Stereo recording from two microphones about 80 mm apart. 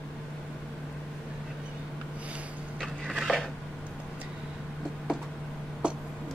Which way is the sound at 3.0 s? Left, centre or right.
Centre.